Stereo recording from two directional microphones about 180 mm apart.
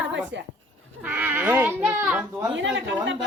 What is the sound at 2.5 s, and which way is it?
Speech, 90° right.